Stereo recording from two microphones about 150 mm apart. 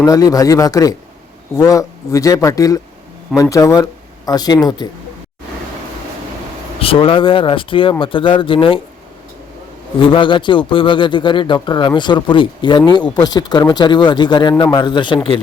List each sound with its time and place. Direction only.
0.0 s speech: 25° left (ahead or behind)
6.7 s a man's voice: 40° left (ahead or behind)
10.0 s a man's voice: 35° left (ahead or behind)